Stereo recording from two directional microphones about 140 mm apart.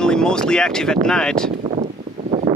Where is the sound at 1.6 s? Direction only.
55° right (ahead or behind).